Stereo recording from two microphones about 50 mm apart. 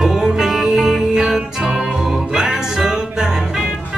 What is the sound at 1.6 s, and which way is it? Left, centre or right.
Music, centre.